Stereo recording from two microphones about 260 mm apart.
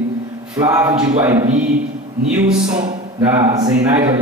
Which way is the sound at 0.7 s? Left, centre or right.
Centre.